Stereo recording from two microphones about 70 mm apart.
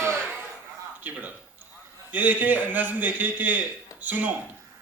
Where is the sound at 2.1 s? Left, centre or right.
Right.